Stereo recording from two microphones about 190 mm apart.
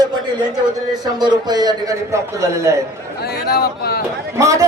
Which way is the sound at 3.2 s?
55° left (ahead or behind).